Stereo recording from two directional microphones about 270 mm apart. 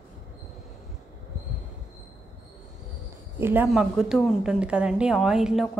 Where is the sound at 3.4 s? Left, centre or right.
Centre.